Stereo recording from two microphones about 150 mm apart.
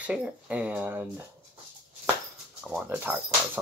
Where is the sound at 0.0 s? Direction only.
10° right (ahead or behind).